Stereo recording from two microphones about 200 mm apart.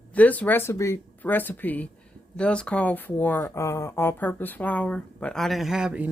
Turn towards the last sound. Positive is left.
turn(degrees=-5)  # may be behind; listen again after turning